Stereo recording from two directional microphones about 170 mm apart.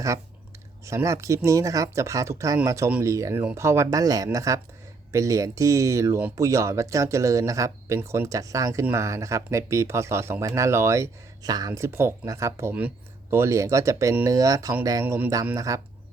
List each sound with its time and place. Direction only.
0.9 s speech: 15° right (ahead or behind)